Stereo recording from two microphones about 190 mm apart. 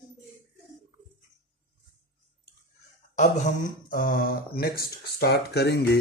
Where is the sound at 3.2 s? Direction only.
45° left (ahead or behind).